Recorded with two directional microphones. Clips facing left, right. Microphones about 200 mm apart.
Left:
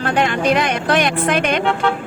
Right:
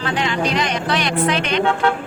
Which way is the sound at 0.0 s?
55° left (ahead or behind).